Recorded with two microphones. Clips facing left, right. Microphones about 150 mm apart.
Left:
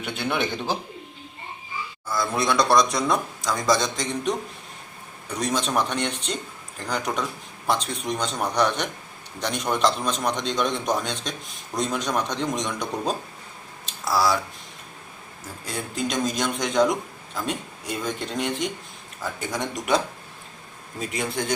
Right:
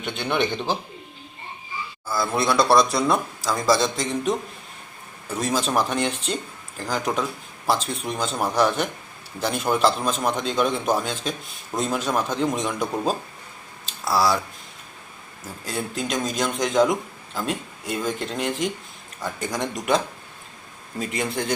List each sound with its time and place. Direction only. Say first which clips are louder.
0.0 s a man's voice: right 1 dB; 5° left (ahead or behind)
0.3 s a man's voice: right 5 dB; 20° right (ahead or behind)
2.0 s a man's voice: right 1 dB; centre (ahead or behind)
15.6 s a man's voice: right 1 dB; centre (ahead or behind)
21.1 s a man's voice: right 1 dB; centre (ahead or behind)